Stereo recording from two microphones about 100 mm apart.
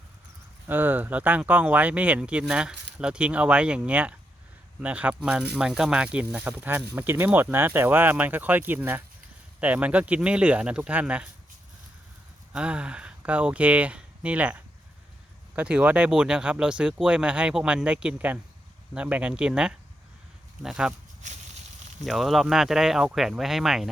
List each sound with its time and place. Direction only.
0.7 s speech: 20° right (ahead or behind)
12.5 s speech: 10° right (ahead or behind)
22.0 s speech: centre (ahead or behind)